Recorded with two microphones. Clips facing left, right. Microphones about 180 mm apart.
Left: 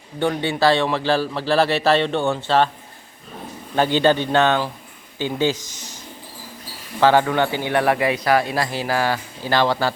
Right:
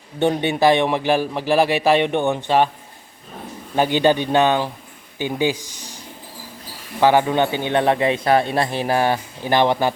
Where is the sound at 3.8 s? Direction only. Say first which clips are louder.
Even; 15° right (ahead or behind).